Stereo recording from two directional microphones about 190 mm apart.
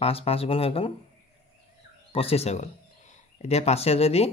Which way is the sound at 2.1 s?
30° left (ahead or behind).